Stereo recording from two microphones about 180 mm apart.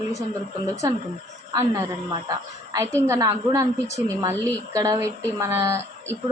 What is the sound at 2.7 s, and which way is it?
A woman's voice, 15° right (ahead or behind).